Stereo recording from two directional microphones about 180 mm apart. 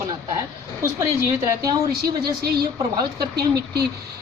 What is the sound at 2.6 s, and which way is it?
Speech, 20° right (ahead or behind).